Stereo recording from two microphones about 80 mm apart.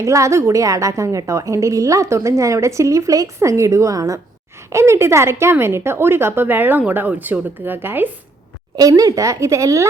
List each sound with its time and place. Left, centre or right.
0.0 s a woman's voice: right
8.7 s speech: right